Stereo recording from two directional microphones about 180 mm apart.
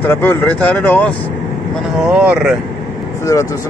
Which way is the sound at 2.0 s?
5° right (ahead or behind).